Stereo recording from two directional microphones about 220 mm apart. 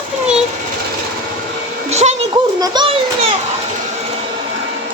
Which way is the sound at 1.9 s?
30° right (ahead or behind).